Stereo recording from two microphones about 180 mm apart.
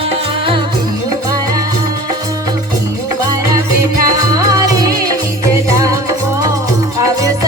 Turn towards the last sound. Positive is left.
turn(degrees=-20)  # may be behind; listen again after turning